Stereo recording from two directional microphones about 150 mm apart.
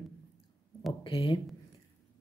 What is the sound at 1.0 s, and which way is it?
Speech, 35° left (ahead or behind).